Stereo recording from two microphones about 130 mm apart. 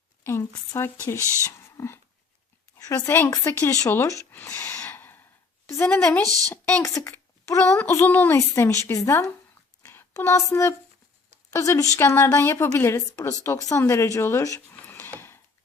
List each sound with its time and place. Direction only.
0.3 s a woman's voice: 20° left (ahead or behind)
1.5 s a sound: 20° left (ahead or behind)
2.7 s a woman's voice: 25° left (ahead or behind)
6.2 s a woman's voice: 30° right (ahead or behind)
6.5 s a woman's voice: 15° left (ahead or behind)
9.8 s a sound: 20° left (ahead or behind)
11.5 s a woman's voice: 25° left (ahead or behind)